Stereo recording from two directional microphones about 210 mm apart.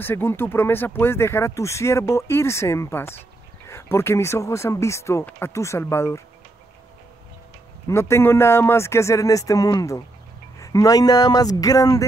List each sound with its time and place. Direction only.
0.0 s speech: 10° left (ahead or behind)
7.9 s speech: 10° left (ahead or behind)